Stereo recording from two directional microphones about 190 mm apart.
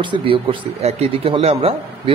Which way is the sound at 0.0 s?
25° right (ahead or behind).